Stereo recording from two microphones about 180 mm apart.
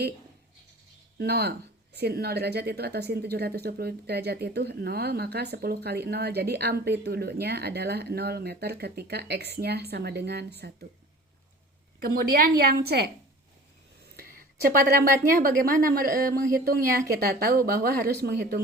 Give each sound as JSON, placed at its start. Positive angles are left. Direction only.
{"t": 1.2, "sound": "speech", "side_deg": -60}
{"t": 11.9, "sound": "speech", "side_deg": -55}
{"t": 14.2, "sound": "a woman's voice", "side_deg": -55}